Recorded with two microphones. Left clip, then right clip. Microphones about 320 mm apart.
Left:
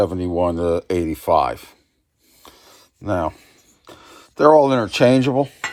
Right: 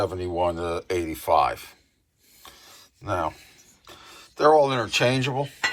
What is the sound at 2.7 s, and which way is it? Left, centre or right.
Speech, left.